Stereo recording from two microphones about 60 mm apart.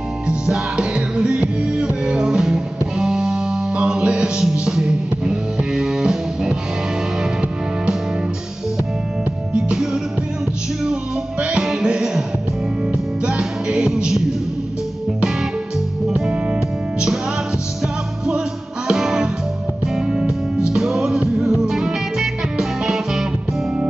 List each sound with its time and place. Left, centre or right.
0.3 s music: centre
9.5 s music: centre
13.2 s music: centre
16.1 s music: centre
18.9 s music: centre